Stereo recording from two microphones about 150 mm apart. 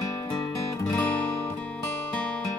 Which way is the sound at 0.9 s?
10° left (ahead or behind).